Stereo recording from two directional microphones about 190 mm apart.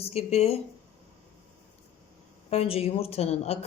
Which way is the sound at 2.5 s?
30° left (ahead or behind).